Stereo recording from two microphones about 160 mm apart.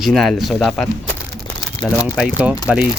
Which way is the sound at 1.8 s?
25° left (ahead or behind).